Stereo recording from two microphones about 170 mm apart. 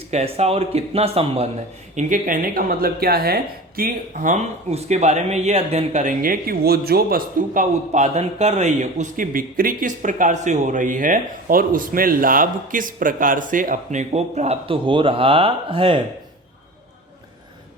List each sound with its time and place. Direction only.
0.1 s speech: 40° right (ahead or behind)
2.0 s a woman's voice: 50° right (ahead or behind); by 16.0 s 30° right (ahead or behind)